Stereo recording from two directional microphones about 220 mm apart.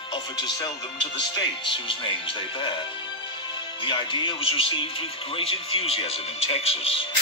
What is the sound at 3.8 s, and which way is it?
Speech, 20° left (ahead or behind).